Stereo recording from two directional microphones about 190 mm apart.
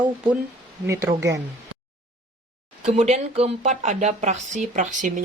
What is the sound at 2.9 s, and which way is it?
Speech, 35° right (ahead or behind).